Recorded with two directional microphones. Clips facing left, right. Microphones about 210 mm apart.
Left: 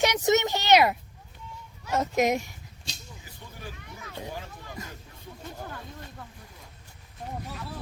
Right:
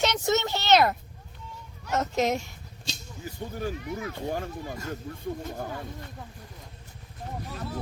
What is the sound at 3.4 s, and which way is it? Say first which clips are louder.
Speech: right 12 dB; 50° right (ahead or behind).